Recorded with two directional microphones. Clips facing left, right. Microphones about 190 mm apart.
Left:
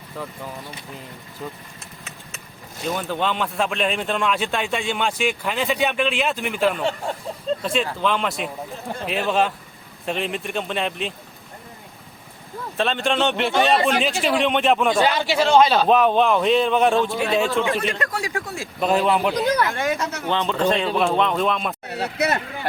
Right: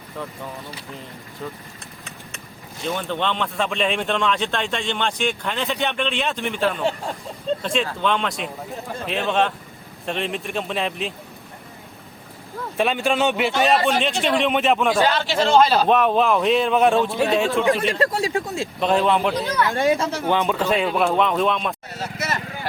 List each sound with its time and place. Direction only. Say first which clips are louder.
2.9 s speech: even; 5° left (ahead or behind)
12.7 s speech: right 1 dB; 10° right (ahead or behind)
15.0 s a man's voice: even; 15° left (ahead or behind)
15.4 s speech: even; centre (ahead or behind)
17.7 s speech: right 4 dB; 30° right (ahead or behind)
18.8 s speech: even; 5° left (ahead or behind)
19.7 s speech: right 4 dB; 30° right (ahead or behind)
20.2 s speech: left 1 dB; 10° right (ahead or behind)
21.8 s speech: left 5 dB; 65° left (ahead or behind)